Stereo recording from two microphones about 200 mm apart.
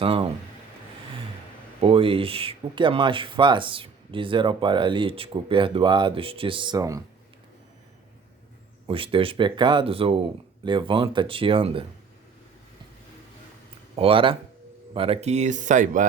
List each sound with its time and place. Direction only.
0.0 s speech: 30° right (ahead or behind)
1.8 s speech: 25° right (ahead or behind)
8.9 s speech: 25° right (ahead or behind)
13.9 s speech: 25° right (ahead or behind)